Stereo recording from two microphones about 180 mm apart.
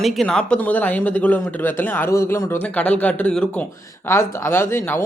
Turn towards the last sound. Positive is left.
turn(degrees=15)  # may be behind; listen again after turning